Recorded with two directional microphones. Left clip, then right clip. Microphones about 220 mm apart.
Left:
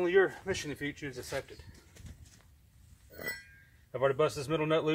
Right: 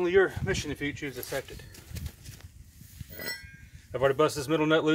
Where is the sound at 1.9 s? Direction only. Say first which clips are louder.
Right 10 dB; 35° right (ahead or behind).